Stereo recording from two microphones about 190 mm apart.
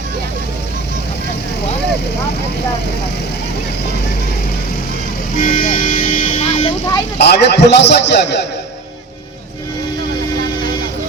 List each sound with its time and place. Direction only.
5.4 s vehicle: 40° left (ahead or behind)
7.2 s a man's voice: 60° left (ahead or behind)